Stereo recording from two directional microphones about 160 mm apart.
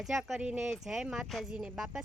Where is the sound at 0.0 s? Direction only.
Centre (ahead or behind).